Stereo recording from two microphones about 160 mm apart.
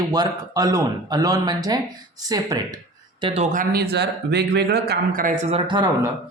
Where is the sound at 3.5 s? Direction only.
75° right (ahead or behind); by 5.4 s 60° right (ahead or behind).